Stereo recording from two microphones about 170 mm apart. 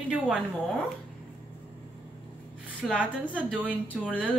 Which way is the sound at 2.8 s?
5° left (ahead or behind).